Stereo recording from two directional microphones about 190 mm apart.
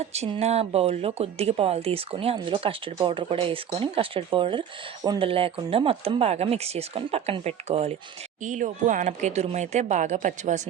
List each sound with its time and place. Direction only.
0.0 s a woman's voice: 35° right (ahead or behind)